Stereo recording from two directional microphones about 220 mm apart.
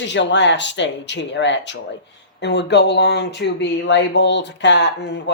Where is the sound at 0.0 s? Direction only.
55° left (ahead or behind).